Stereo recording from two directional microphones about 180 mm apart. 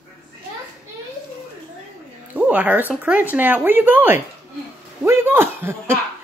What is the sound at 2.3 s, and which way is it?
A woman's voice, 10° right (ahead or behind).